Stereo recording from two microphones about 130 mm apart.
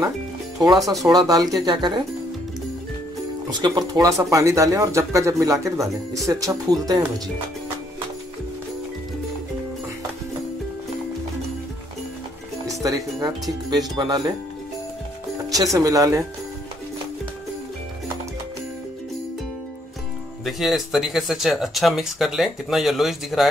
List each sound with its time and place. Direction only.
1.0 s speech: 30° right (ahead or behind)
3.4 s speech: 30° right (ahead or behind)
12.8 s speech: 30° right (ahead or behind)
15.5 s speech: 25° right (ahead or behind)
20.4 s speech: centre (ahead or behind)